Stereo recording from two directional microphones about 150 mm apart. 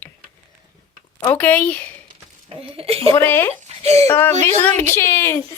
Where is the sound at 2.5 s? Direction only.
40° right (ahead or behind).